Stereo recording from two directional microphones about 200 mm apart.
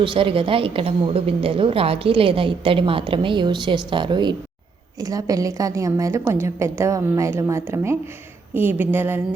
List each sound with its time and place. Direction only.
0.0 s a woman's voice: 25° right (ahead or behind); by 9.2 s 10° right (ahead or behind)